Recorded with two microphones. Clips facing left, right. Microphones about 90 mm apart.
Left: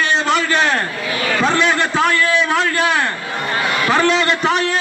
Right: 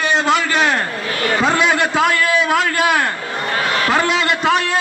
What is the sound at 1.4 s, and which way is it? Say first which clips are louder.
Speech: even; 10° right (ahead or behind).